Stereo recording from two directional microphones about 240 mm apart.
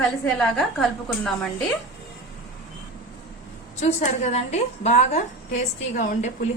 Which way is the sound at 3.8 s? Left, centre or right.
Left.